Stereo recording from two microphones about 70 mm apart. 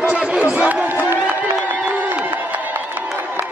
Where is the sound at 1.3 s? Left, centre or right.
Right.